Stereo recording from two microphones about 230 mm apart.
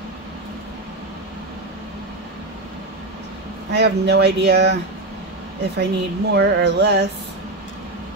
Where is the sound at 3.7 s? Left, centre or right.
Right.